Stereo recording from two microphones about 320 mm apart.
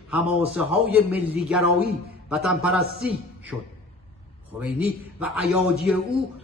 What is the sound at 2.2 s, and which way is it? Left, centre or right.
Speech, centre.